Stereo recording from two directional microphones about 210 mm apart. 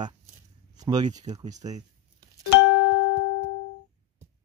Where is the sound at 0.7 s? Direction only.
20° right (ahead or behind).